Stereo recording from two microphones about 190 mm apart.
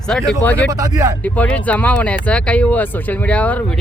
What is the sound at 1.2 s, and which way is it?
Speech, 5° left (ahead or behind).